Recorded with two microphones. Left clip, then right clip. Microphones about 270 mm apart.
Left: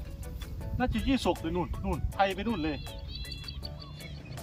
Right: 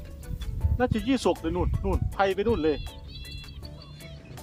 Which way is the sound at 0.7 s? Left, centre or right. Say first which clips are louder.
Right 4 dB; centre.